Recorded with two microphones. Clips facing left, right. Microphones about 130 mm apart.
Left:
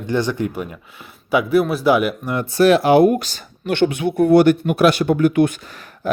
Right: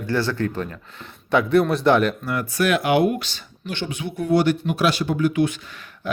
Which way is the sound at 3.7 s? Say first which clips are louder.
Left 11 dB; 60° left (ahead or behind).